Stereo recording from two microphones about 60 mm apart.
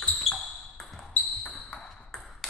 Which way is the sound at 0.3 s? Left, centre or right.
Centre.